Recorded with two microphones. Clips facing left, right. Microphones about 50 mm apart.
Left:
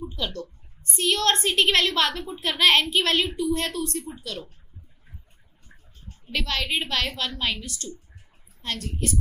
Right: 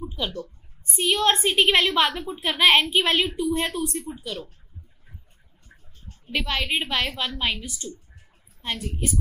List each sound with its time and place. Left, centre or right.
0.0 s a woman's voice: centre
2.2 s a woman's voice: centre
2.6 s a woman's voice: centre
6.3 s a woman's voice: centre